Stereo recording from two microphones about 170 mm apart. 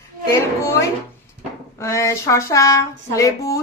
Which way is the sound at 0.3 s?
15° left (ahead or behind).